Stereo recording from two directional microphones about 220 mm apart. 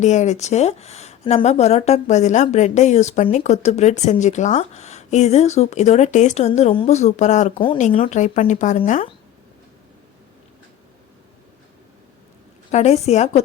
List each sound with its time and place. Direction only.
0.0 s speech: 30° left (ahead or behind)
12.7 s speech: 30° left (ahead or behind)